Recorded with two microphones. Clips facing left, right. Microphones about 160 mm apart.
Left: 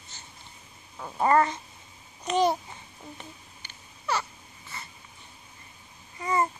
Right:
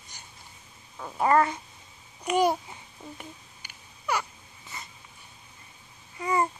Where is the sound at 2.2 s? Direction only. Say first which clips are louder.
Even; 10° right (ahead or behind).